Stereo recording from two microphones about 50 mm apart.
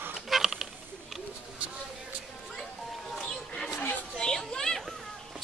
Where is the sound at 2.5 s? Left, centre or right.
Centre.